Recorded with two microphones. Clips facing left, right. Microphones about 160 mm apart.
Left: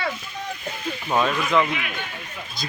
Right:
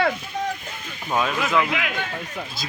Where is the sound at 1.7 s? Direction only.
90° right.